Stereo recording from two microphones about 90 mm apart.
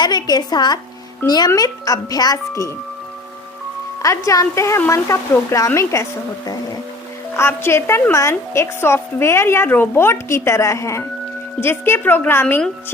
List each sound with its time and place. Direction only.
0.0 s a woman's voice: 50° left (ahead or behind)
1.5 s speech: 40° left (ahead or behind)
4.0 s speech: 35° left (ahead or behind)
7.3 s a woman's voice: 30° left (ahead or behind)